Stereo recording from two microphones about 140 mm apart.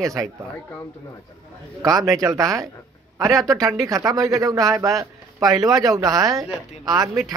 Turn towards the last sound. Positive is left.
turn(degrees=-30)  # may be behind; listen again after turning